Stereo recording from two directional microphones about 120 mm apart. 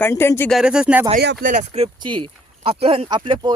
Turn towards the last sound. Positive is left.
turn(degrees=-40)  # may be behind; listen again after turning